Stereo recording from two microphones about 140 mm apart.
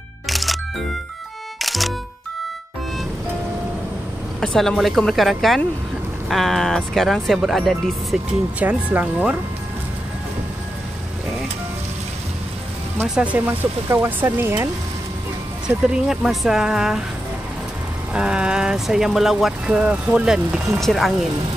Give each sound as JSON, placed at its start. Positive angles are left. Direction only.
{"t": 0.3, "sound": "music", "side_deg": 0}
{"t": 4.6, "sound": "speech", "side_deg": 0}
{"t": 8.5, "sound": "speech", "side_deg": -10}
{"t": 13.0, "sound": "speech", "side_deg": -5}
{"t": 15.6, "sound": "speech", "side_deg": -5}
{"t": 18.1, "sound": "speech", "side_deg": -5}